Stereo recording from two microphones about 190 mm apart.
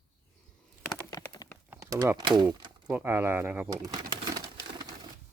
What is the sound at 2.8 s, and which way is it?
Speech, 10° right (ahead or behind).